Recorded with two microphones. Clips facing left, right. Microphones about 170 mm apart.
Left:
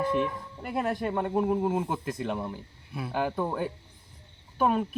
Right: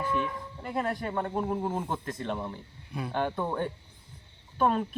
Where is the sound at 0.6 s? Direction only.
10° left (ahead or behind).